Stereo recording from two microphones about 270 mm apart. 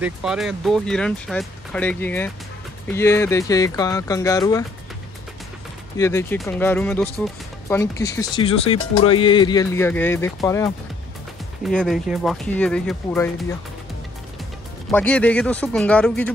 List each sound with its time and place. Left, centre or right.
0.0 s speech: centre
5.9 s speech: centre
11.6 s speech: centre
14.9 s speech: centre